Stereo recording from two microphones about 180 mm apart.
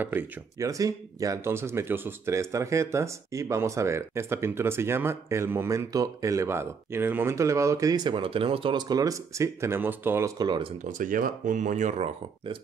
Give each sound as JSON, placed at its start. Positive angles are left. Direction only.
{"t": 0.0, "sound": "speech", "side_deg": -10}
{"t": 10.8, "sound": "speech", "side_deg": -50}